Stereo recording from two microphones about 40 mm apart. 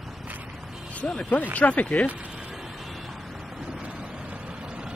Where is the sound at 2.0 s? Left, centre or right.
Right.